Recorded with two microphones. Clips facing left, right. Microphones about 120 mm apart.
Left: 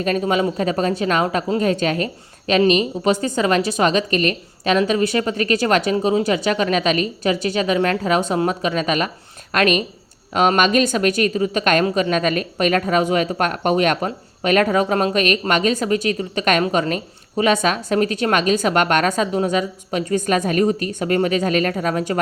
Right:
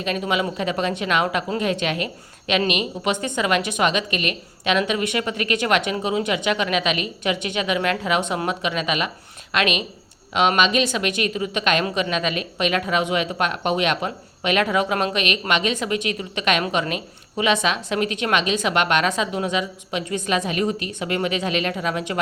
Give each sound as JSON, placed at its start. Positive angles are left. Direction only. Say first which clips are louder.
{"t": 0.0, "sound": "a woman's voice", "louder": "left 5 dB", "side_deg": 40}